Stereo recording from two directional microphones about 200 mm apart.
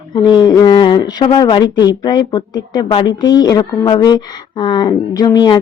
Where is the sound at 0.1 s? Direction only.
20° left (ahead or behind).